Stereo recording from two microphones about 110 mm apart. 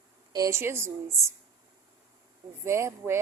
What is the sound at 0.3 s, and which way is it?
Speech, 30° right (ahead or behind).